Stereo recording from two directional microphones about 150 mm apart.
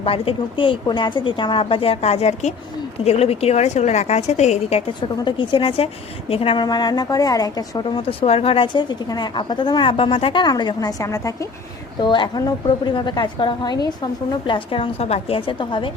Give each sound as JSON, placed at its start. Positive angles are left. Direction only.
{"t": 0.0, "sound": "a woman's voice", "side_deg": 40}
{"t": 5.2, "sound": "a woman's voice", "side_deg": 35}